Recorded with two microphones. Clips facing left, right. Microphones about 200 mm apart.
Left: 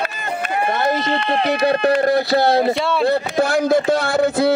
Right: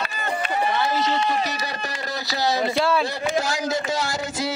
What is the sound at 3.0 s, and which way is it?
Speech, 60° left (ahead or behind).